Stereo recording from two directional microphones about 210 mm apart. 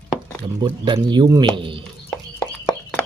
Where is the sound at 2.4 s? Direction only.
5° left (ahead or behind).